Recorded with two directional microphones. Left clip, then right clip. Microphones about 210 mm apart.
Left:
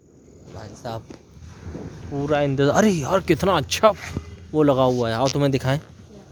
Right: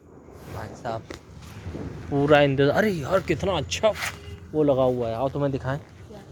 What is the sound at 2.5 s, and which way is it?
Speech, 25° left (ahead or behind).